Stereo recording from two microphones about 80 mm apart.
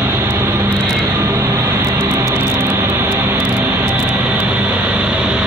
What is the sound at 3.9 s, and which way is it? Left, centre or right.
Vehicle, right.